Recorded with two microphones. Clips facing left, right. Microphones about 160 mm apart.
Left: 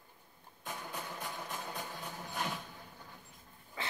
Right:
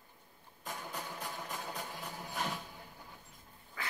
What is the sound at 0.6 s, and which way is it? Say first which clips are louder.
Music: even; centre (ahead or behind).